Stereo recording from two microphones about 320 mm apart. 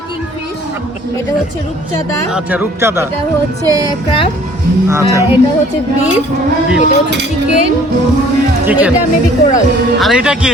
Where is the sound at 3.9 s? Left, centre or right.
Centre.